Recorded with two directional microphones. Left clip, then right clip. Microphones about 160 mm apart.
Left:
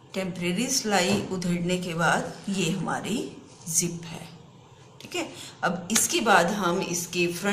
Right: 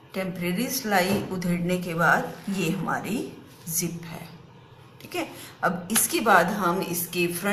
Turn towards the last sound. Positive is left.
turn(degrees=-5)  # may be behind; listen again after turning